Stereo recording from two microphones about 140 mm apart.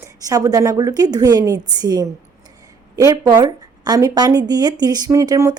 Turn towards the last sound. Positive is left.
turn(degrees=-20)  # may be behind; listen again after turning